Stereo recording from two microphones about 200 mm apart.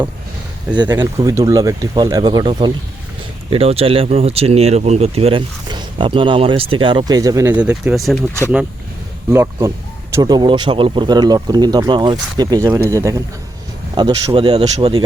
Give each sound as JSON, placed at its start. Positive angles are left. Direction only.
{"t": 0.9, "sound": "speech", "side_deg": -15}
{"t": 9.3, "sound": "speech", "side_deg": -15}